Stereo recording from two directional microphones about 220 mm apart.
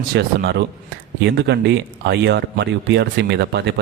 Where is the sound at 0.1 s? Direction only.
45° right (ahead or behind).